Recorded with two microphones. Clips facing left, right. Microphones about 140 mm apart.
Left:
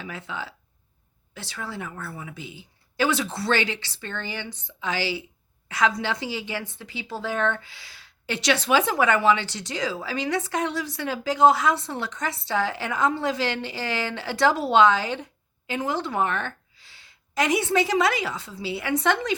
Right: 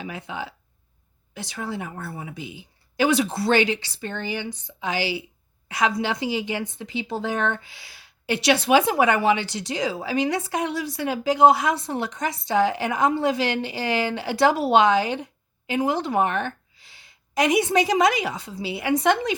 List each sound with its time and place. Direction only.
0.0 s a woman's voice: 15° right (ahead or behind)